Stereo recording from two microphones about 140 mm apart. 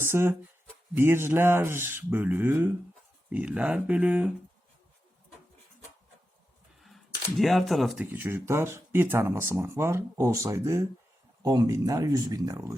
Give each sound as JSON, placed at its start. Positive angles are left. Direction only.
{"t": 0.0, "sound": "speech", "side_deg": -15}
{"t": 6.8, "sound": "speech", "side_deg": 0}
{"t": 8.0, "sound": "speech", "side_deg": -15}